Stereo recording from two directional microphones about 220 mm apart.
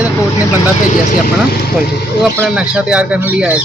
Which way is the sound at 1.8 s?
5° right (ahead or behind).